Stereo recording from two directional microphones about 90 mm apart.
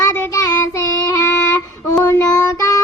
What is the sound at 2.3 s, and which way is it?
Child singing, 40° left (ahead or behind).